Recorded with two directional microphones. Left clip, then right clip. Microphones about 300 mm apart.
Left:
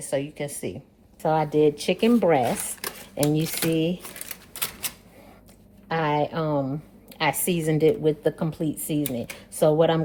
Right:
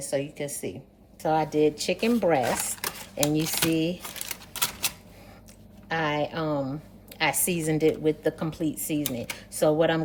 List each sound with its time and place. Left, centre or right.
0.0 s a woman's voice: left
5.9 s a sound: left
7.2 s a woman's voice: left